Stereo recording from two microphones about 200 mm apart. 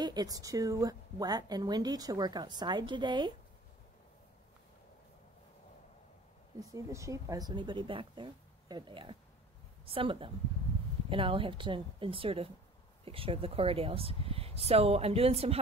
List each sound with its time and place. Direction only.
0.0 s a woman's voice: 20° right (ahead or behind)
6.7 s a woman's voice: 15° right (ahead or behind)